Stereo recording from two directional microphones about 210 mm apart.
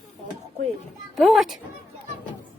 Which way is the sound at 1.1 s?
Centre (ahead or behind).